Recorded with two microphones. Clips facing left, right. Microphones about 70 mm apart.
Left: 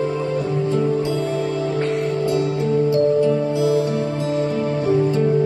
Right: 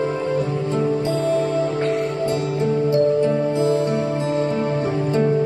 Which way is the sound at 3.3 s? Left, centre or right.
Right.